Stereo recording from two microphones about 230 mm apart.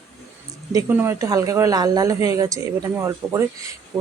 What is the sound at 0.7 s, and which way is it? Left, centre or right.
Speech, centre.